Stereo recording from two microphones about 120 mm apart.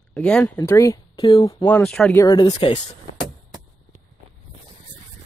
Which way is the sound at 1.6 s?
10° left (ahead or behind).